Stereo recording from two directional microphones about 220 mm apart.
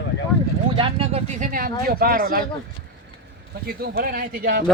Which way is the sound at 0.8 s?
25° right (ahead or behind).